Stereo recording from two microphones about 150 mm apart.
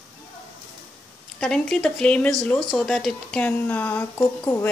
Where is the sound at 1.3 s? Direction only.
5° left (ahead or behind).